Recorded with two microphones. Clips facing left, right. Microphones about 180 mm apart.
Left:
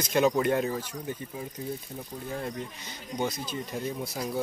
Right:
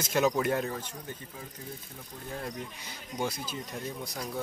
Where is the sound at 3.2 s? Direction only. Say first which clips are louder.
Left 2 dB; 5° right (ahead or behind).